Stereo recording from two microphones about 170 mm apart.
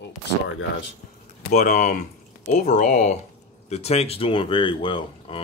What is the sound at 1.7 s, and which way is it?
Speech, 45° left (ahead or behind).